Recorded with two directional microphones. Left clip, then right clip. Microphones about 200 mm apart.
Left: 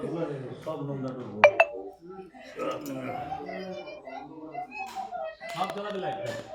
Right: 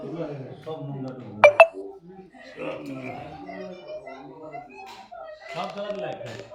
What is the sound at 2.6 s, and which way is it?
Speech, centre (ahead or behind).